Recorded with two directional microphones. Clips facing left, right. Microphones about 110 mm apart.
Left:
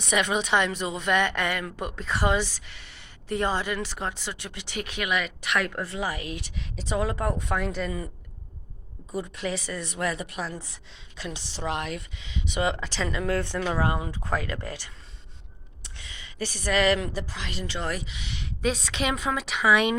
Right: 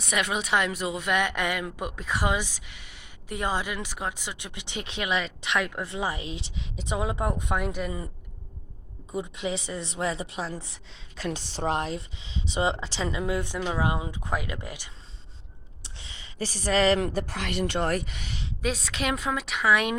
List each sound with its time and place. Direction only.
0.1 s speech: 5° right (ahead or behind)
9.1 s speech: 20° right (ahead or behind)
11.2 s speech: 45° right (ahead or behind); by 14.9 s 15° right (ahead or behind)
15.8 s a sound: 25° right (ahead or behind)
17.2 s a woman's voice: 60° right (ahead or behind); by 18.4 s 45° right (ahead or behind)
18.6 s a woman's voice: centre (ahead or behind)